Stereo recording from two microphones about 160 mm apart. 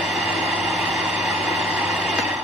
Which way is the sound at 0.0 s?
Centre (ahead or behind).